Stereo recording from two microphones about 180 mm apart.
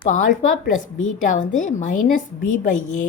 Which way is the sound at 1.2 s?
45° left (ahead or behind).